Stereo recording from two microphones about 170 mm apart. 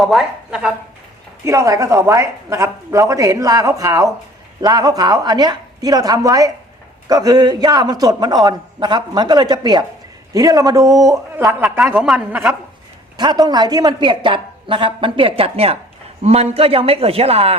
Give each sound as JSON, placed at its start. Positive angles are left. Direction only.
{"t": 0.0, "sound": "a man's voice", "side_deg": 0}
{"t": 1.5, "sound": "a man's voice", "side_deg": -20}
{"t": 13.1, "sound": "a man's voice", "side_deg": -25}